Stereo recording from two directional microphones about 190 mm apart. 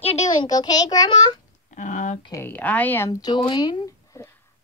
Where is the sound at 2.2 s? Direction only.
15° left (ahead or behind).